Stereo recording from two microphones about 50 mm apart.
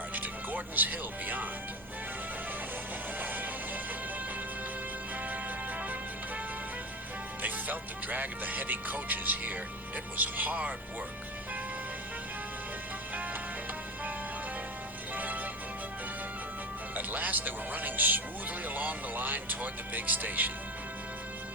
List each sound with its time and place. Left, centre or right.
0.1 s music: right
3.2 s music: right
7.4 s music: right
15.1 s music: right
16.9 s speech: right
18.6 s music: right